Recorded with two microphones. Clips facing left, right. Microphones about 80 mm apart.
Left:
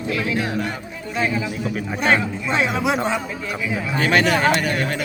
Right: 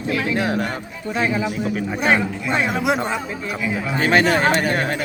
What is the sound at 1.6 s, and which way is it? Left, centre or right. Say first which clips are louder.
A man's voice: left 1 dB; centre.